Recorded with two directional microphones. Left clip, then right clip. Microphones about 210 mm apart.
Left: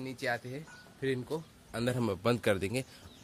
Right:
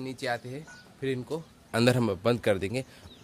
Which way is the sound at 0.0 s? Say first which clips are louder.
Right 3 dB; centre (ahead or behind).